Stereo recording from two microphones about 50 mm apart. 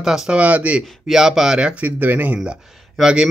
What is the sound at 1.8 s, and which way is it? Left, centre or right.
Speech, right.